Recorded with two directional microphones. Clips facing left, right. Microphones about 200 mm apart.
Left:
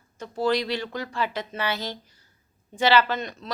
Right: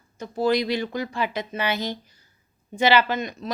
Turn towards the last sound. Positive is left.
turn(degrees=-10)  # may be behind; listen again after turning